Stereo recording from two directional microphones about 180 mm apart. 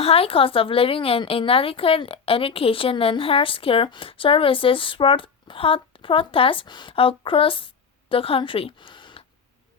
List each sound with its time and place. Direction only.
0.0 s speech: 30° left (ahead or behind)